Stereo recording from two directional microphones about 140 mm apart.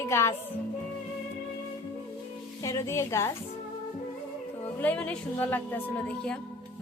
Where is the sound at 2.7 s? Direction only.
20° left (ahead or behind).